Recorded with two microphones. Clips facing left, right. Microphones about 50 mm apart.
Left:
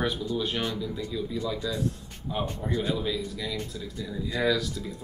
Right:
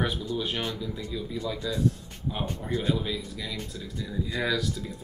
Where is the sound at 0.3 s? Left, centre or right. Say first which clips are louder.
Left 1 dB; centre.